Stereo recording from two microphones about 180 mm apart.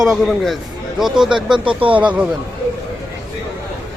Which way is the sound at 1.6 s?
30° right (ahead or behind).